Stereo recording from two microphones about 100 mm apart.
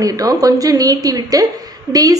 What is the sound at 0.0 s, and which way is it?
A woman's voice, 35° right (ahead or behind).